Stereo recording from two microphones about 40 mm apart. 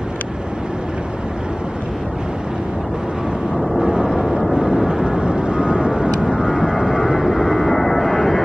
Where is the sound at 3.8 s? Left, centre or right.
Centre.